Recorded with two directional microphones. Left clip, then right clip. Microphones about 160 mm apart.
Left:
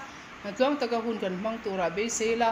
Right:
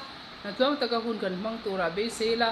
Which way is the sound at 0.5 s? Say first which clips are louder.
Even; 15° left (ahead or behind).